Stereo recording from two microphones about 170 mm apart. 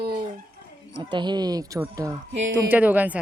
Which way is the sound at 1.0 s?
25° right (ahead or behind).